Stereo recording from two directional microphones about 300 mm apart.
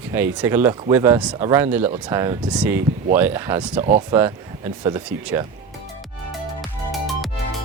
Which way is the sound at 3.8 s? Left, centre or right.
Right.